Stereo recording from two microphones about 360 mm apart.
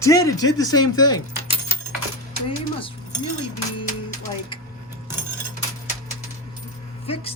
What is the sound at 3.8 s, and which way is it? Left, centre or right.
Music, centre.